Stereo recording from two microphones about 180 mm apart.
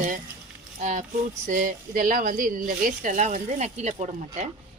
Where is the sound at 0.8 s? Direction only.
45° right (ahead or behind).